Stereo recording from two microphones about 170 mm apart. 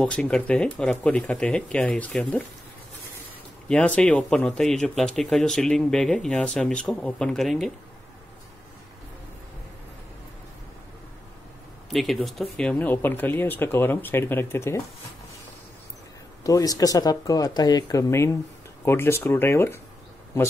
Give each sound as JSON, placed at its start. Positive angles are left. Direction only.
{"t": 0.0, "sound": "speech", "side_deg": 5}
{"t": 3.6, "sound": "speech", "side_deg": 5}
{"t": 11.9, "sound": "speech", "side_deg": 0}
{"t": 16.4, "sound": "speech", "side_deg": 20}